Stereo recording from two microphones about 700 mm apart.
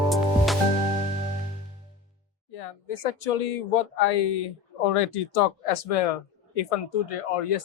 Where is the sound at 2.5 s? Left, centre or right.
Left.